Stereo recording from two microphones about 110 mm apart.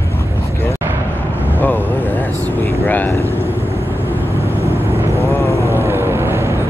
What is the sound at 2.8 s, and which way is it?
Speech, 15° left (ahead or behind).